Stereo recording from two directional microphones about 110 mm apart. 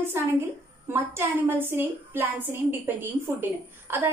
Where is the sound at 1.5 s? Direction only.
20° right (ahead or behind).